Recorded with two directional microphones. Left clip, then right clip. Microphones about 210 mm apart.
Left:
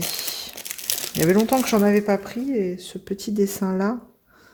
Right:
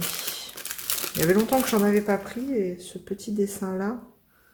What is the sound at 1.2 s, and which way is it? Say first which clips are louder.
Speech: left 3 dB; 35° left (ahead or behind).